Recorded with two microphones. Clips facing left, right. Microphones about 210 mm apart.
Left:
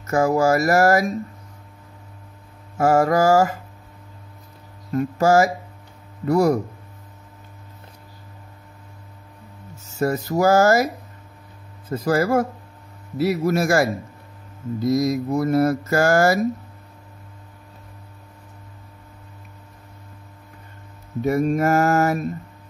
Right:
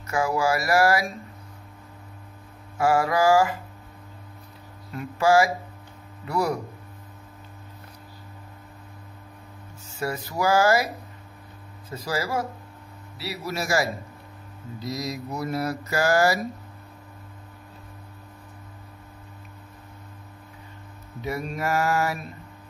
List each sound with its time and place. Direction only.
0.0 s mantra: 45° left (ahead or behind)
2.8 s mantra: 45° left (ahead or behind)
4.9 s mantra: 45° left (ahead or behind)
9.8 s mantra: 45° left (ahead or behind)
11.9 s mantra: 50° left (ahead or behind)
21.2 s mantra: 45° left (ahead or behind)